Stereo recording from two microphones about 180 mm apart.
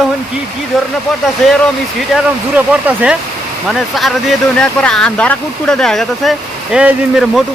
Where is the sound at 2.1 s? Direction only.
10° right (ahead or behind).